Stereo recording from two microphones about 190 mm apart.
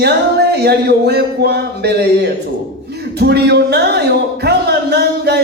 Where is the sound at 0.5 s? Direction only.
60° right (ahead or behind).